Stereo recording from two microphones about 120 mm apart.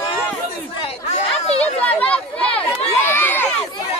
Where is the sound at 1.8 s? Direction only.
10° left (ahead or behind).